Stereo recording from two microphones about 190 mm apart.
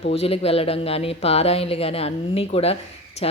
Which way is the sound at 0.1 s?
30° left (ahead or behind).